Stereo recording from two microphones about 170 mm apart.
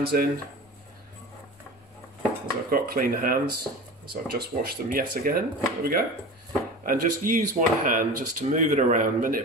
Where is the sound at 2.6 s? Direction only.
60° right (ahead or behind).